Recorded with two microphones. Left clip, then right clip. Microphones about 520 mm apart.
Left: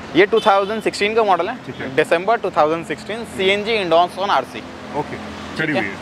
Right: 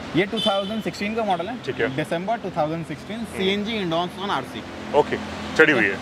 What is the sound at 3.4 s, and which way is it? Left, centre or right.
Speech, left.